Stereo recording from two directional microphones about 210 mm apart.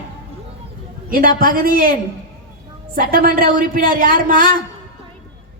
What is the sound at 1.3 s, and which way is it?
Speech, 45° right (ahead or behind).